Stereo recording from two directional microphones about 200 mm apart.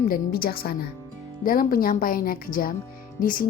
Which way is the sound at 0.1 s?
50° left (ahead or behind).